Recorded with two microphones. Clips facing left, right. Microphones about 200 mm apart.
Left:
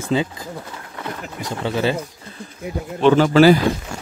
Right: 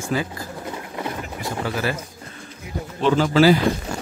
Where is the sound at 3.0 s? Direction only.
65° left (ahead or behind).